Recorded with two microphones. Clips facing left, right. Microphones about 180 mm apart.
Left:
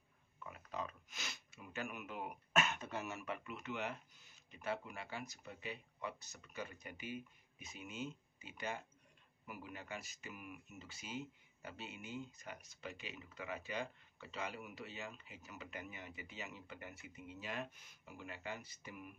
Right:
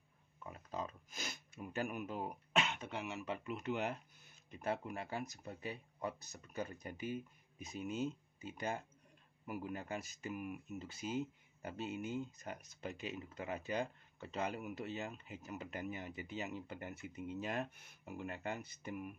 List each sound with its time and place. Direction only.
0.4 s pig: 35° right (ahead or behind)
1.1 s throat clearing: 50° right (ahead or behind)
2.8 s speech: 15° right (ahead or behind)
3.3 s speech: 35° right (ahead or behind); by 19.0 s 50° right (ahead or behind)